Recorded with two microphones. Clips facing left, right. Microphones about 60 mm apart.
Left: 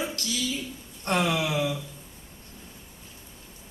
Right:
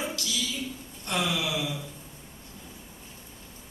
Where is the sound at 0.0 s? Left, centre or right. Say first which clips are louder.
Left 1 dB; left.